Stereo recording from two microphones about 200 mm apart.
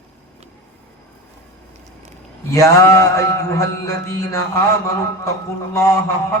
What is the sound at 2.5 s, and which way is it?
A man's voice, 15° left (ahead or behind).